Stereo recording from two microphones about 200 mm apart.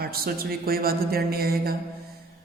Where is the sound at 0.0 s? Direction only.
50° right (ahead or behind).